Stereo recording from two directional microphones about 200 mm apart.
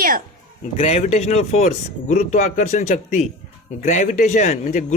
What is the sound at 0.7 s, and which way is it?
Speech, 30° left (ahead or behind).